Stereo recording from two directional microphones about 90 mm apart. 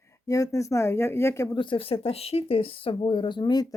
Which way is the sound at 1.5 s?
65° left (ahead or behind).